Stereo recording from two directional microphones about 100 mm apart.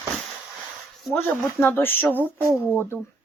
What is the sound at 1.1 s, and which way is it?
A woman's voice, 20° left (ahead or behind).